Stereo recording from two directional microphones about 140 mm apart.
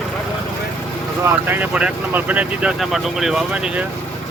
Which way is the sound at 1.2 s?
15° right (ahead or behind).